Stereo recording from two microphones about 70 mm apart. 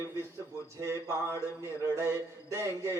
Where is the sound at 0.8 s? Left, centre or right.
Right.